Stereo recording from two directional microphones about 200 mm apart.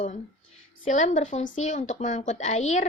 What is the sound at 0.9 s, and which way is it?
A woman's voice, 40° left (ahead or behind).